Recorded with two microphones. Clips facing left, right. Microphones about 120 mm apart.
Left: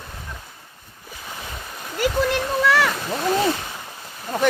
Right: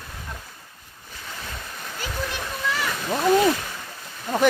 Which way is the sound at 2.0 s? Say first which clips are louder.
Left 11 dB; 75° left (ahead or behind).